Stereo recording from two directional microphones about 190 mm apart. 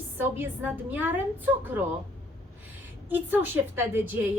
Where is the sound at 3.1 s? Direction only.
10° right (ahead or behind).